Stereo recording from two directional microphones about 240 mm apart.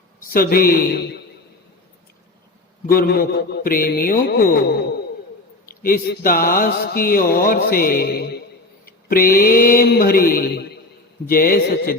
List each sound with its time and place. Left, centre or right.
0.2 s speech: left
2.8 s speech: left
5.8 s speech: left